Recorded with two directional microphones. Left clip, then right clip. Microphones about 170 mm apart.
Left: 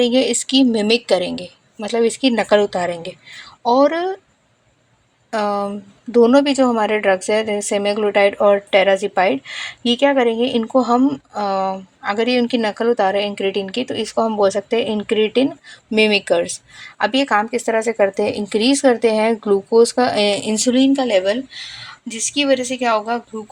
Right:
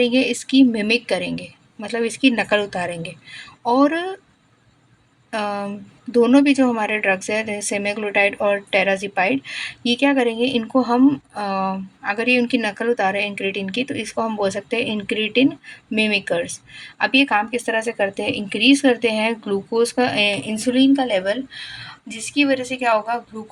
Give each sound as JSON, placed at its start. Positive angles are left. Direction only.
{"t": 0.0, "sound": "speech", "side_deg": 20}
{"t": 5.3, "sound": "a woman's voice", "side_deg": 15}
{"t": 16.0, "sound": "speech", "side_deg": 25}